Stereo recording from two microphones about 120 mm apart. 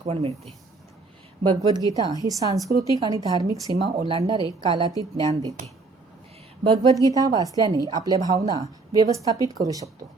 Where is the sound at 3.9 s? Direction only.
50° right (ahead or behind).